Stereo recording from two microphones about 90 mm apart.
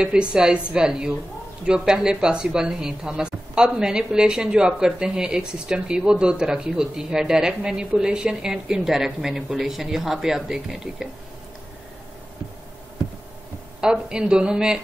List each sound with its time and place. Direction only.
0.0 s speech: 10° right (ahead or behind)
13.7 s speech: 10° right (ahead or behind)